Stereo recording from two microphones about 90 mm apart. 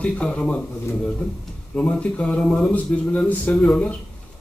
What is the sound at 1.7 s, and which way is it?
A man's voice, 15° left (ahead or behind).